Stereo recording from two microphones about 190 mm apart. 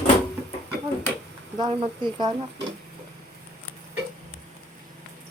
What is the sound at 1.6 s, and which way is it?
Speech, 25° right (ahead or behind).